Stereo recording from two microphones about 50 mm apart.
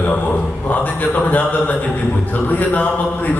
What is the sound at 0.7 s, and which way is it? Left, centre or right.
A man's voice, left.